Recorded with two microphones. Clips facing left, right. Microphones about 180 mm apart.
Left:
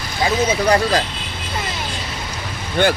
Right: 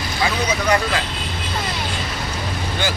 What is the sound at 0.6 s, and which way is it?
Speech, 35° left (ahead or behind).